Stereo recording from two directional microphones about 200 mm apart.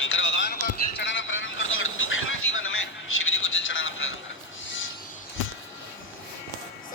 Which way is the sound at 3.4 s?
75° left (ahead or behind).